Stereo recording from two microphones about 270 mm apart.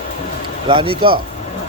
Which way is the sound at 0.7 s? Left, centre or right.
Centre.